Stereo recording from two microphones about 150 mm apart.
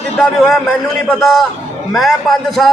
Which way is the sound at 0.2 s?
Centre (ahead or behind).